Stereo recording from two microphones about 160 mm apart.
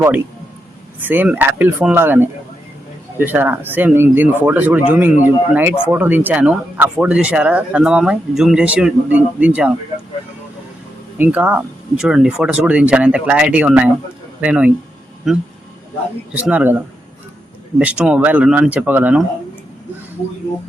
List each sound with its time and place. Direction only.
0.9 s speech: 10° right (ahead or behind)
11.2 s speech: 10° right (ahead or behind)